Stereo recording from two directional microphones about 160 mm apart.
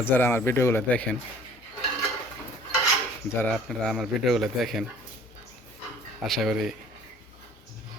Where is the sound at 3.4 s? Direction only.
Centre (ahead or behind).